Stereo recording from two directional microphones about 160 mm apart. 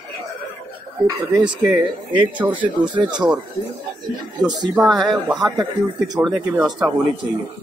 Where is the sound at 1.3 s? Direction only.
5° right (ahead or behind).